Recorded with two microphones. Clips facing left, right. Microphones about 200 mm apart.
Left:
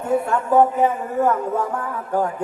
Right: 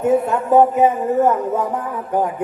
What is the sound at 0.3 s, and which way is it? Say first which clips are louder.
Speech: right 3 dB; 20° right (ahead or behind).